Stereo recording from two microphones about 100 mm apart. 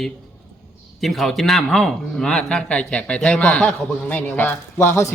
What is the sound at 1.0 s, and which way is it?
Speech, centre (ahead or behind).